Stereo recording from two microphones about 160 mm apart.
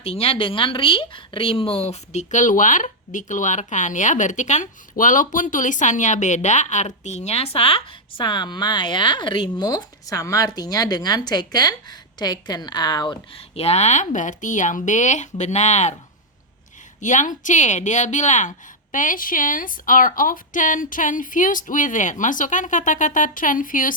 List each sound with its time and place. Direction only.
0.0 s speech: 40° left (ahead or behind)
17.0 s a woman's voice: 50° left (ahead or behind)